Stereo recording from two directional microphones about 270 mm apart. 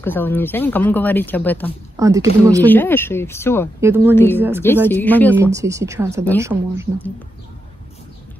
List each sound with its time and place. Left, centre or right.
0.0 s speech: centre
2.0 s speech: centre
2.6 s speech: centre
3.8 s speech: centre
4.1 s speech: centre
4.4 s speech: centre
4.8 s speech: centre
5.3 s speech: centre